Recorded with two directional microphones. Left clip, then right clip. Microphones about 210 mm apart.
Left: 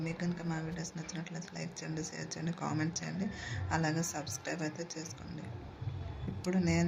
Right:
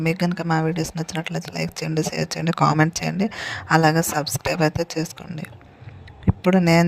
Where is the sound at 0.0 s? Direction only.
55° right (ahead or behind).